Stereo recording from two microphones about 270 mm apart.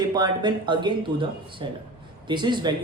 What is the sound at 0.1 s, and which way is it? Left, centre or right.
Speech, centre.